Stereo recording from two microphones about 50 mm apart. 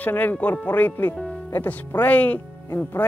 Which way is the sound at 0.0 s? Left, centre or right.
Left.